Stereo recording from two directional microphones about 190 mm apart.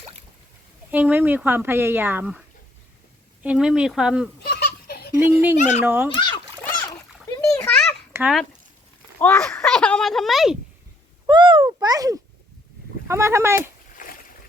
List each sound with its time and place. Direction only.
0.9 s speech: 10° right (ahead or behind)
3.4 s speech: 5° right (ahead or behind)
4.4 s baby laughter: 55° left (ahead or behind)
5.2 s speech: 10° right (ahead or behind)
5.5 s speech: 40° left (ahead or behind)
5.8 s speech: 10° right (ahead or behind)
7.6 s a sound: 5° left (ahead or behind)
8.1 s speech: 5° right (ahead or behind)
9.1 s speech: 10° left (ahead or behind)
11.3 s a sound: 25° right (ahead or behind)
13.1 s speech: 15° right (ahead or behind)
13.6 s a sound: 45° left (ahead or behind)